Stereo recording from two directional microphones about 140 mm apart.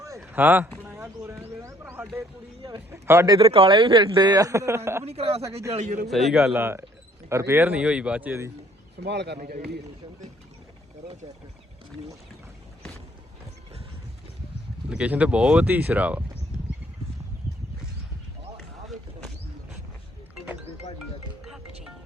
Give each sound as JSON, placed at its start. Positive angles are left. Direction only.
{"t": 0.2, "sound": "speech", "side_deg": -10}
{"t": 0.8, "sound": "a sound", "side_deg": -15}
{"t": 2.6, "sound": "a sound", "side_deg": -35}
{"t": 2.9, "sound": "speech", "side_deg": -20}
{"t": 3.5, "sound": "speech", "side_deg": -40}
{"t": 5.0, "sound": "speech", "side_deg": -45}
{"t": 5.7, "sound": "a man's voice", "side_deg": -60}
{"t": 6.1, "sound": "a man's voice", "side_deg": 0}
{"t": 6.4, "sound": "speech", "side_deg": -15}
{"t": 14.8, "sound": "speech", "side_deg": -10}